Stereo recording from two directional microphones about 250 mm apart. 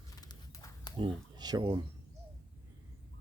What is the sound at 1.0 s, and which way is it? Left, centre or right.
Speech, centre.